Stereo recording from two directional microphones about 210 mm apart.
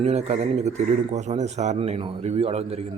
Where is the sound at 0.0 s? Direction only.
30° right (ahead or behind).